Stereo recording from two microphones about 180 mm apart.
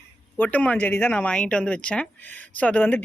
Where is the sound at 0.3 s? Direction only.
10° left (ahead or behind).